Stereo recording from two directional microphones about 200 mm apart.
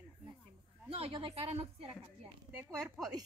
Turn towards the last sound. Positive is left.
turn(degrees=0)  # may be behind; listen again after turning